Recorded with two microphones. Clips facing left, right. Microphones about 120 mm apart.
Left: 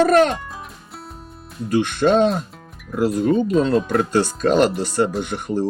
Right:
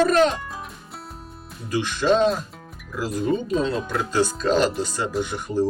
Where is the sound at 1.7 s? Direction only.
55° left (ahead or behind).